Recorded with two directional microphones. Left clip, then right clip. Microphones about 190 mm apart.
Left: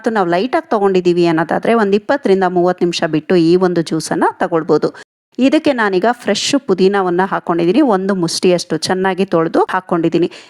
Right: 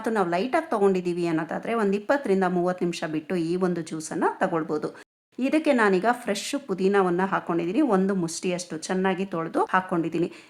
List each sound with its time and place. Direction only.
0.0 s speech: 35° left (ahead or behind)